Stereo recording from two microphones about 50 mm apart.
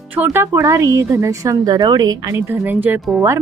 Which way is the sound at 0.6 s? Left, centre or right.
Right.